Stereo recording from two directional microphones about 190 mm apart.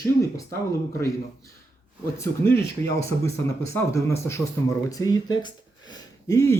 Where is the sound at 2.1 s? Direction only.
10° left (ahead or behind).